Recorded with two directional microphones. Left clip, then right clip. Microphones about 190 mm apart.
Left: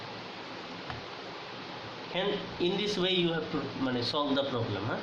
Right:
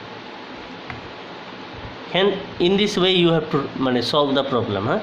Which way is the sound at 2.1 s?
55° right (ahead or behind).